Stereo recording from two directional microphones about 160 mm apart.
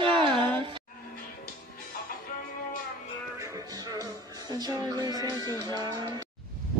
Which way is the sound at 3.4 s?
20° right (ahead or behind).